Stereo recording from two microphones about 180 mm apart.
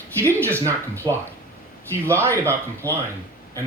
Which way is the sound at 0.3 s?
15° right (ahead or behind).